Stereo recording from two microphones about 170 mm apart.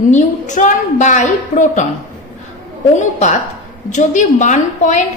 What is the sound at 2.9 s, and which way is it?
A woman's voice, 45° left (ahead or behind).